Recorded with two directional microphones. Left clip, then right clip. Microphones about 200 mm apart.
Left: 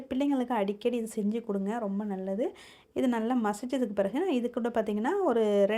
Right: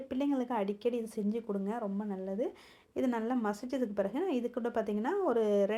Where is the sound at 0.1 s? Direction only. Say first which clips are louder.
Left 4 dB; 30° left (ahead or behind).